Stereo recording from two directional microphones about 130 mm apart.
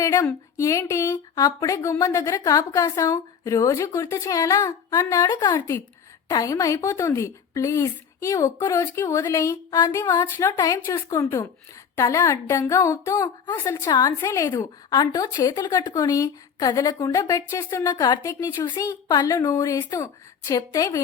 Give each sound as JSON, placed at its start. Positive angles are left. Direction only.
{"t": 0.0, "sound": "speech", "side_deg": 20}
{"t": 5.2, "sound": "speech", "side_deg": 35}
{"t": 9.6, "sound": "a sound", "side_deg": 35}
{"t": 10.2, "sound": "speech", "side_deg": 20}
{"t": 10.6, "sound": "speech", "side_deg": 30}